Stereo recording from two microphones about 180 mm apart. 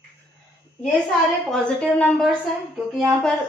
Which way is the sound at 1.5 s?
5° left (ahead or behind).